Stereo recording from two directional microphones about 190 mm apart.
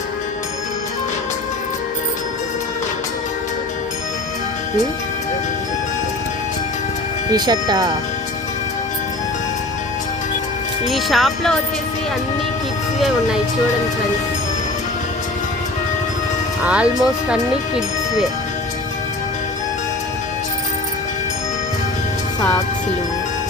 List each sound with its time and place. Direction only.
7.3 s speech: 20° right (ahead or behind)
10.8 s speech: centre (ahead or behind)
13.0 s speech: 5° right (ahead or behind)
16.6 s speech: 5° right (ahead or behind)